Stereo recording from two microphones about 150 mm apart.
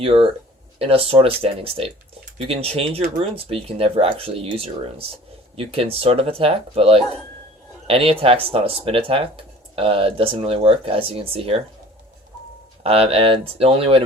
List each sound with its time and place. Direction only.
0.0 s speech: 40° right (ahead or behind)
12.8 s speech: 40° right (ahead or behind)